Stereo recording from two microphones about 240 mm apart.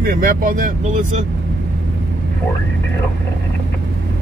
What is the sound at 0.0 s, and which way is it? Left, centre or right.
Speech, right.